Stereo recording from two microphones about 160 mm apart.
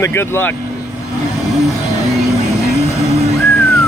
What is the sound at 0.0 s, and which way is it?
Speech, 15° left (ahead or behind).